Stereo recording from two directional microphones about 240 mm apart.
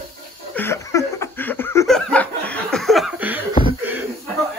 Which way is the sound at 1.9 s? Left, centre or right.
Centre.